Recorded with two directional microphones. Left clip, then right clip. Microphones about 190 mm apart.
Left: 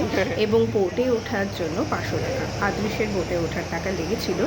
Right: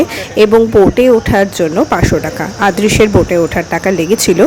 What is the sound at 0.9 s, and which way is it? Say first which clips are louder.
Speech: right 15 dB; 55° right (ahead or behind).